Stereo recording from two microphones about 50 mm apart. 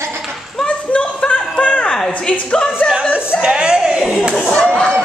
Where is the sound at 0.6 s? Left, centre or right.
Left.